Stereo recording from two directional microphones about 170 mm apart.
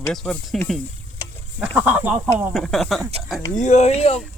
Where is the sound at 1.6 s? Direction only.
10° right (ahead or behind).